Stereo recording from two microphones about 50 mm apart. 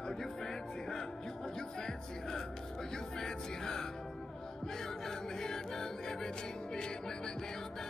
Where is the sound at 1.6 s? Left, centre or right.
Centre.